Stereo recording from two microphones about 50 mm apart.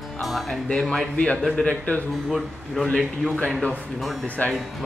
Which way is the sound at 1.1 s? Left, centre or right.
Left.